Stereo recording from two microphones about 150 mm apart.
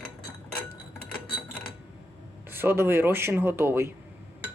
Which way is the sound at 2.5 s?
15° right (ahead or behind).